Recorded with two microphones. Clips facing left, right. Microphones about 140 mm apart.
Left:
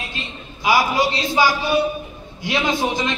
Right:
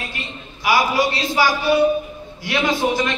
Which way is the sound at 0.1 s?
20° left (ahead or behind).